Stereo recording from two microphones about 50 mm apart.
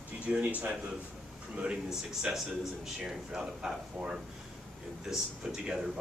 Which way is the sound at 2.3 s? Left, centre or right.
Centre.